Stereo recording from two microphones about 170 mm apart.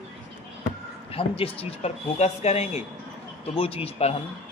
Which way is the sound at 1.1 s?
35° left (ahead or behind).